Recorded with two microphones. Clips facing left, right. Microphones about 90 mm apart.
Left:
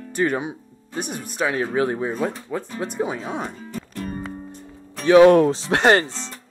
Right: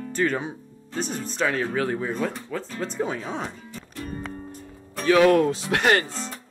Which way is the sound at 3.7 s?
55° left (ahead or behind).